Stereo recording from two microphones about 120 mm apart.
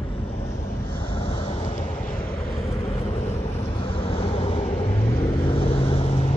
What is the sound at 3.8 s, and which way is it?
Vehicle, 50° left (ahead or behind).